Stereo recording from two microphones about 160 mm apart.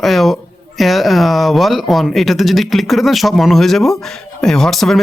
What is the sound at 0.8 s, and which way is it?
Speech, centre (ahead or behind).